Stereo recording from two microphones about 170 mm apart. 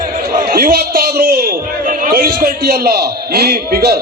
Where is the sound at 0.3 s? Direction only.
60° right (ahead or behind).